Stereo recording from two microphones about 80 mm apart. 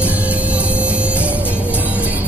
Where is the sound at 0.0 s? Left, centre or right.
Centre.